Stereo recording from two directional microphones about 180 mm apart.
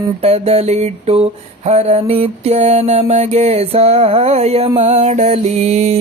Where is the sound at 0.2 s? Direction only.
35° right (ahead or behind).